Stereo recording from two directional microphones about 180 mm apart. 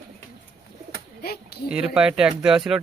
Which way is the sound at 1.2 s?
60° left (ahead or behind).